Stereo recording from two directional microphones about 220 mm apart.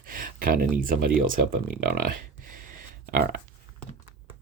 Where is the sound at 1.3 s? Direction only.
40° right (ahead or behind).